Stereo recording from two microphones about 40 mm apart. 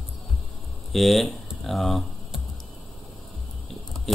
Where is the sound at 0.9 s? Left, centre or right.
Centre.